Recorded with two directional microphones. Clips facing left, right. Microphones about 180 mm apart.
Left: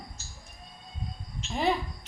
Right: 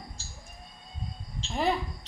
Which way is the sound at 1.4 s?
30° right (ahead or behind).